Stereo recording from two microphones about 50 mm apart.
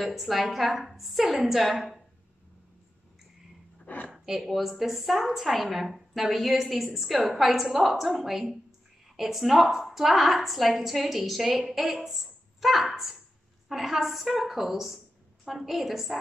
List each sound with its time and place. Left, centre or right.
0.0 s a woman's voice: centre
3.8 s a sound: left
4.1 s a woman's voice: centre